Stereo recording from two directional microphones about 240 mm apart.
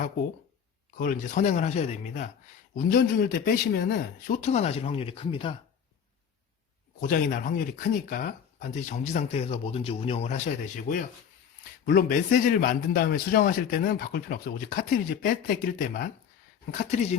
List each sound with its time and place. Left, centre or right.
0.9 s a man's voice: left
7.1 s a man's voice: left